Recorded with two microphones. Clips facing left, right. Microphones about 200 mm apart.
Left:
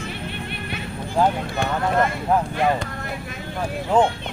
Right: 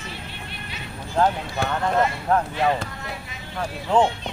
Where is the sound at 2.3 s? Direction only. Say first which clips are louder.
Left 1 dB; 5° left (ahead or behind).